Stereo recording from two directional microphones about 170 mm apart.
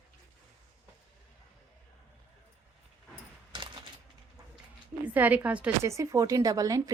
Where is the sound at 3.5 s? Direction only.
30° right (ahead or behind).